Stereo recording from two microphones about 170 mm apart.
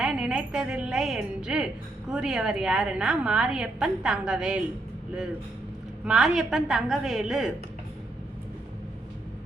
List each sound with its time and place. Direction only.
0.0 s a woman's voice: 5° right (ahead or behind)
6.1 s a woman's voice: centre (ahead or behind)